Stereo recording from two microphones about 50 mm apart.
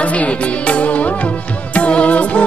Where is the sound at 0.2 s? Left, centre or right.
Left.